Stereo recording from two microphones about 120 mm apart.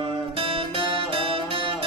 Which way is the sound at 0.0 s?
50° right (ahead or behind).